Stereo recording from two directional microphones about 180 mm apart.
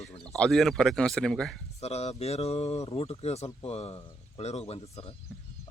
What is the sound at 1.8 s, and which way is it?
Speech, 35° left (ahead or behind).